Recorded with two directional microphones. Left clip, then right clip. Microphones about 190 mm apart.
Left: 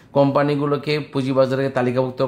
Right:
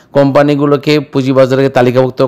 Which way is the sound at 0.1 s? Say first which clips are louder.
Right 9 dB; 40° right (ahead or behind).